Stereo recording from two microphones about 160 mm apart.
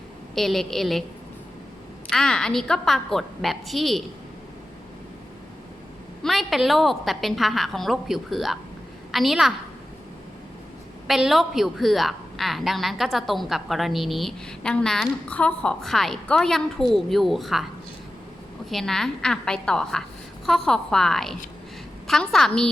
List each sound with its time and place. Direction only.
0.3 s a woman's voice: centre (ahead or behind)
2.0 s a woman's voice: 5° left (ahead or behind)
6.2 s a woman's voice: centre (ahead or behind)
11.1 s a woman's voice: centre (ahead or behind)
18.7 s a woman's voice: centre (ahead or behind)